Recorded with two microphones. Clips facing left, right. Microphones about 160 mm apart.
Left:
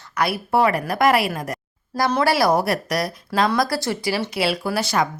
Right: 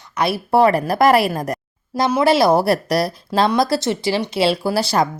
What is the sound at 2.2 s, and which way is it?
Speech, 25° right (ahead or behind).